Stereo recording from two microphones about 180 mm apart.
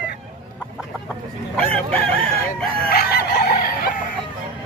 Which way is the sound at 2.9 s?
60° left (ahead or behind).